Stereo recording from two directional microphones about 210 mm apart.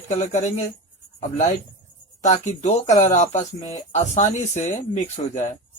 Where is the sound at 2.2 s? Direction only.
35° left (ahead or behind).